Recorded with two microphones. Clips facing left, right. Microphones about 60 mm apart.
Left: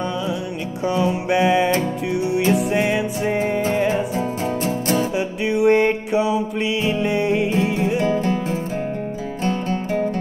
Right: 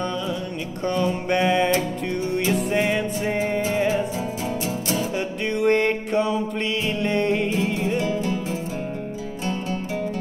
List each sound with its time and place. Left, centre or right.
0.8 s mantra: centre
2.1 s music: centre
4.6 s music: left
5.1 s music: centre
8.0 s music: left